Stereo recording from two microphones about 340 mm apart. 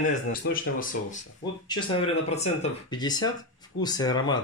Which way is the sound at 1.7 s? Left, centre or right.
Centre.